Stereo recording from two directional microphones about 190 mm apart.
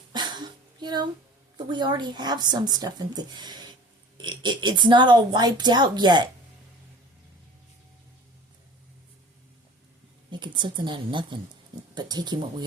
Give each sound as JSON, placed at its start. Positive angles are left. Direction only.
{"t": 0.1, "sound": "a sound", "side_deg": -20}
{"t": 1.5, "sound": "a woman's voice", "side_deg": -25}
{"t": 10.3, "sound": "a woman's voice", "side_deg": -25}